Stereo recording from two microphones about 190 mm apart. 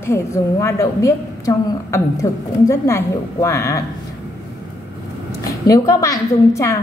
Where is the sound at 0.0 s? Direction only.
15° left (ahead or behind).